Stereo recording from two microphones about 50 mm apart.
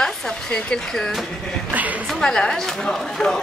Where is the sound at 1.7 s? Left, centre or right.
Right.